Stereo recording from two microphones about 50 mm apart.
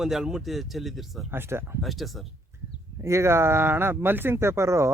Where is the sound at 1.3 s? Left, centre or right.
Right.